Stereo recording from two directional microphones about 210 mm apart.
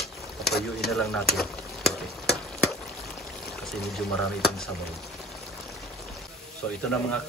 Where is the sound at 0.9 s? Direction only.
Centre (ahead or behind).